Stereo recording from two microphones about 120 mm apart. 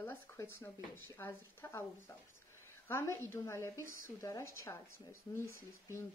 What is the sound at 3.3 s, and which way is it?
A woman's voice, 20° left (ahead or behind).